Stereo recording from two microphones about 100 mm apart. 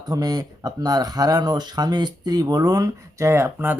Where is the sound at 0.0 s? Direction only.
40° right (ahead or behind).